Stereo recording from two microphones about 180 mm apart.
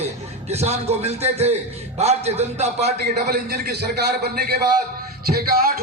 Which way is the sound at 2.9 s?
60° right (ahead or behind).